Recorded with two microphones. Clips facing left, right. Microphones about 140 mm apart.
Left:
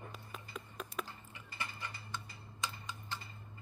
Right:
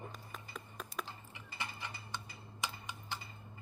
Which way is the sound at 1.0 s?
25° right (ahead or behind).